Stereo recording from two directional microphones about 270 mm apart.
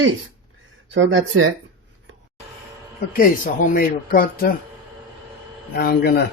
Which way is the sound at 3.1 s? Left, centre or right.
Left.